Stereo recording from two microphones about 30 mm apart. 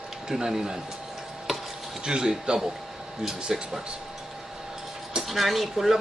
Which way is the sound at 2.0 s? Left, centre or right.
Right.